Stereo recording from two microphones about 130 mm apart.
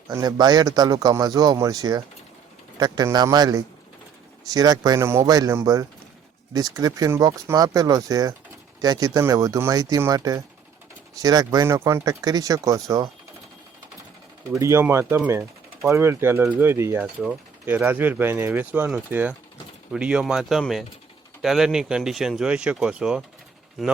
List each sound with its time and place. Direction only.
0.1 s speech: 30° right (ahead or behind)
14.5 s speech: 20° right (ahead or behind); by 23.2 s 5° right (ahead or behind)